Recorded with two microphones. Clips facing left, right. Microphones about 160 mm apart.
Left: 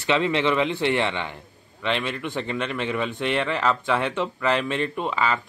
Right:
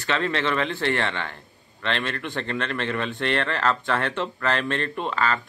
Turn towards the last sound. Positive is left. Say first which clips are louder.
# left 1 dB
turn(degrees=10)  # may be behind; listen again after turning